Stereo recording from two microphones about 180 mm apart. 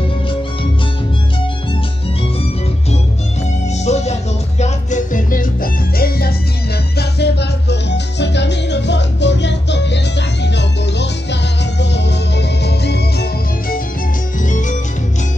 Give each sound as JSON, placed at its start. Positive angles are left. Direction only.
{"t": 3.8, "sound": "music", "side_deg": 40}
{"t": 14.4, "sound": "music", "side_deg": 45}